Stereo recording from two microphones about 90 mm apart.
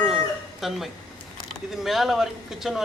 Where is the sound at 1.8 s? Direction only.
5° right (ahead or behind).